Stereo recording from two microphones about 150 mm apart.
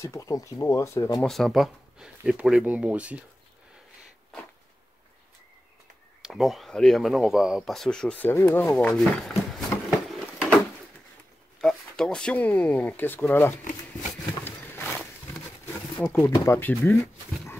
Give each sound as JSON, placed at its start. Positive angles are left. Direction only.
{"t": 0.0, "sound": "speech", "side_deg": 20}
{"t": 1.2, "sound": "speech", "side_deg": 0}
{"t": 6.2, "sound": "speech", "side_deg": 0}
{"t": 11.6, "sound": "speech", "side_deg": 5}
{"t": 14.3, "sound": "a sound", "side_deg": 15}
{"t": 15.6, "sound": "wild animals", "side_deg": 15}
{"t": 16.4, "sound": "speech", "side_deg": 15}